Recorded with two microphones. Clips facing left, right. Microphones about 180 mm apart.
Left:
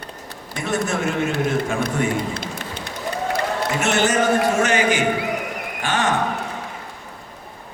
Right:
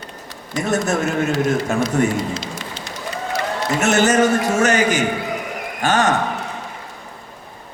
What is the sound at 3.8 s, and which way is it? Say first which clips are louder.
A man's voice: right 5 dB; 40° right (ahead or behind).